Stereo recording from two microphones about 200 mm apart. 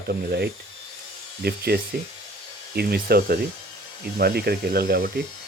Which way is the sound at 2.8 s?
50° right (ahead or behind).